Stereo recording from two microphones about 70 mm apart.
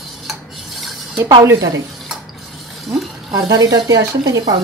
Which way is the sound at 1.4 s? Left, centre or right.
Right.